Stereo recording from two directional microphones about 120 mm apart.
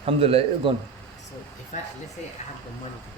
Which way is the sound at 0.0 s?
55° right (ahead or behind).